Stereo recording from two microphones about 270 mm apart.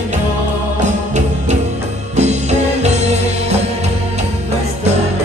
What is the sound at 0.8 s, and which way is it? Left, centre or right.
Music, right.